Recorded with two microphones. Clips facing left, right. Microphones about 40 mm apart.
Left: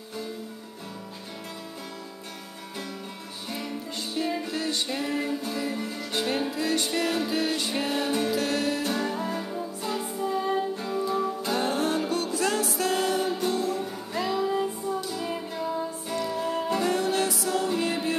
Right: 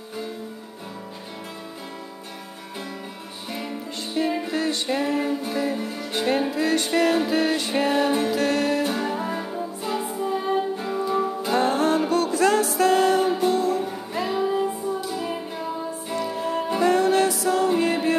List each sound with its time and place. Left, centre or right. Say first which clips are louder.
3.5 s music: right 2 dB; right